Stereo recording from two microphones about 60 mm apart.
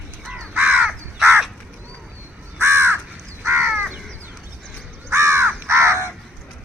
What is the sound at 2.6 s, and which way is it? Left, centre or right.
Crow, right.